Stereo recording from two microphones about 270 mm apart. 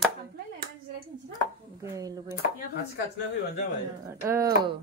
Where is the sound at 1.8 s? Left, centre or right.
Centre.